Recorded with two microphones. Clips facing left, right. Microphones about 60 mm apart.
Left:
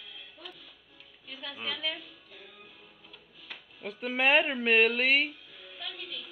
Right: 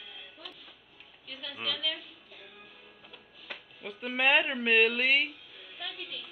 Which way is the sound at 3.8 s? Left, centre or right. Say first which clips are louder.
Left 1 dB; centre.